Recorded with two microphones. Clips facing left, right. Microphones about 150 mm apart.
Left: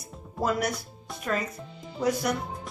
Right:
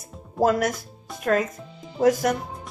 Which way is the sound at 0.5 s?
90° right.